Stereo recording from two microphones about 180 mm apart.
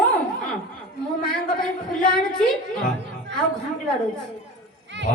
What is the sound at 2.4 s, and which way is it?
Speech, 5° left (ahead or behind).